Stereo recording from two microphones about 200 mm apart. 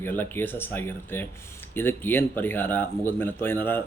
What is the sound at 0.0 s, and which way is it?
Speech, 10° left (ahead or behind).